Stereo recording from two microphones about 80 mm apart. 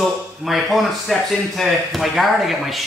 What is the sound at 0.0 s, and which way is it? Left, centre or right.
Speech, centre.